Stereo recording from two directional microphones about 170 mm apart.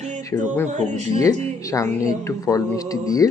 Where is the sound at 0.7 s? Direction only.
45° right (ahead or behind).